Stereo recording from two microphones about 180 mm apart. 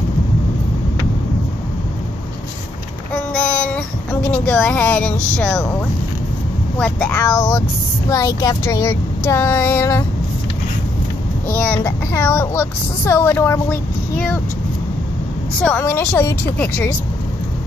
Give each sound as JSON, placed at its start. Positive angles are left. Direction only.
{"t": 3.3, "sound": "a sound", "side_deg": 5}
{"t": 6.8, "sound": "speech", "side_deg": 10}
{"t": 11.5, "sound": "speech", "side_deg": 10}
{"t": 15.6, "sound": "speech", "side_deg": 10}